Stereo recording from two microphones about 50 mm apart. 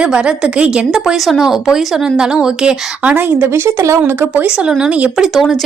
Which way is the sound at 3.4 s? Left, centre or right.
Right.